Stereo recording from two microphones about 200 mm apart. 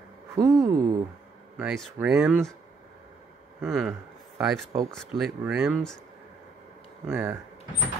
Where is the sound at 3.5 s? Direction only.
Centre (ahead or behind).